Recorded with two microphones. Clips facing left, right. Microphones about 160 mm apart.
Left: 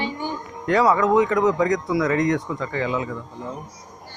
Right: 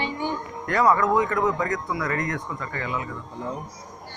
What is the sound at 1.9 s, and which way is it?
Speech, 90° left.